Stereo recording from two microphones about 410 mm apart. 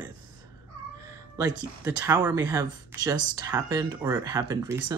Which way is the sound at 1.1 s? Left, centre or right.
Centre.